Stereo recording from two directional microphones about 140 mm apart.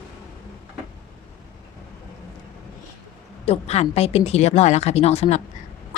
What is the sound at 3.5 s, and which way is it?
Speech, 50° left (ahead or behind).